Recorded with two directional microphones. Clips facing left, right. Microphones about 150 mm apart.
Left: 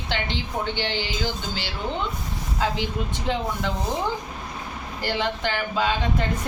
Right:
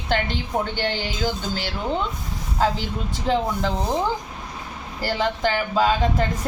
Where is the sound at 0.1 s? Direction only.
45° right (ahead or behind).